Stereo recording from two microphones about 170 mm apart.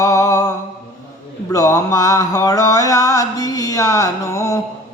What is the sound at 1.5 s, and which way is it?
Mantra, 20° left (ahead or behind).